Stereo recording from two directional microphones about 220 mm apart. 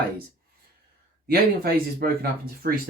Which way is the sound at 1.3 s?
45° right (ahead or behind).